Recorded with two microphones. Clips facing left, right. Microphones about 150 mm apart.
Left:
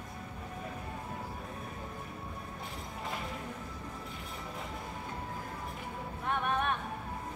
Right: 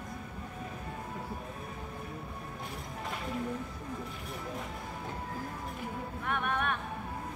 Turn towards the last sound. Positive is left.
turn(degrees=25)  # may be behind; listen again after turning